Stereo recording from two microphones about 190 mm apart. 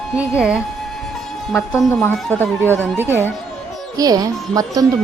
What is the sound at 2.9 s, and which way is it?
Speech, 10° right (ahead or behind).